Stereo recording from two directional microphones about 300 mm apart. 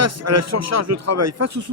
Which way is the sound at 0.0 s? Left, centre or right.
Right.